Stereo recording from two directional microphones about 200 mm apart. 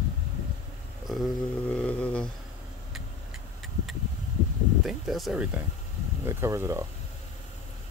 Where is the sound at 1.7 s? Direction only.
5° left (ahead or behind).